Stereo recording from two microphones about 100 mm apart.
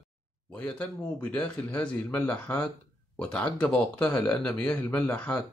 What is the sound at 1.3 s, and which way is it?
Speech, 10° left (ahead or behind).